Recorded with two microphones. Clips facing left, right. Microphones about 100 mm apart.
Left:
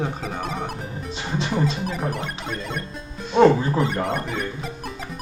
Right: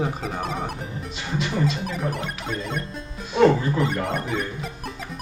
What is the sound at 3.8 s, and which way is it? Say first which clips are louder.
Music: left 1 dB; centre (ahead or behind).